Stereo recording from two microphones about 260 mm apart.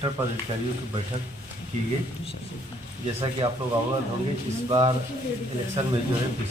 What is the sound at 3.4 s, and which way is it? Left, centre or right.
Speech, centre.